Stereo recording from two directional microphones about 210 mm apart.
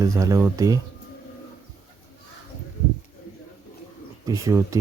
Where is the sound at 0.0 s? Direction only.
15° right (ahead or behind).